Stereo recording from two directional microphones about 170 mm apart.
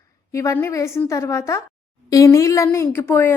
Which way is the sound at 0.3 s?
20° left (ahead or behind).